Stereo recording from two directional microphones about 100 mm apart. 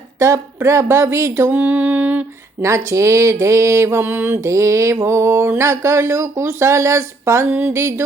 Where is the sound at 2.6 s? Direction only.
30° right (ahead or behind).